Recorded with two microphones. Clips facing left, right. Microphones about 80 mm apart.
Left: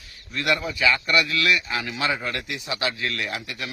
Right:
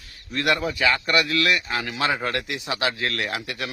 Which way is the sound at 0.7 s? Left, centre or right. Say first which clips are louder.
Even; right.